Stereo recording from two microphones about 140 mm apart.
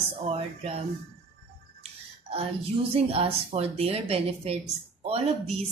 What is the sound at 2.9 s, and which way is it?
Speech, 45° right (ahead or behind).